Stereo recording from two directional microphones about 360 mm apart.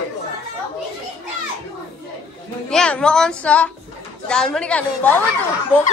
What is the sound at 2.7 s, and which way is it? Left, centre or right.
A woman's voice, centre.